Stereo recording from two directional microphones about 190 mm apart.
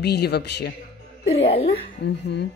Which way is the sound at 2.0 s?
60° left (ahead or behind).